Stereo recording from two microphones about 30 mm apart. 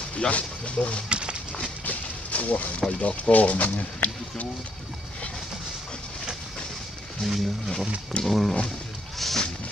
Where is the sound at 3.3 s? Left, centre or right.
Left.